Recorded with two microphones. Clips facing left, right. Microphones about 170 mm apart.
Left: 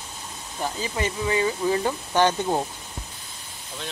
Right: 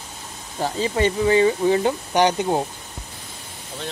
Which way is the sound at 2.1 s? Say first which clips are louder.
Right 2 dB; 15° right (ahead or behind).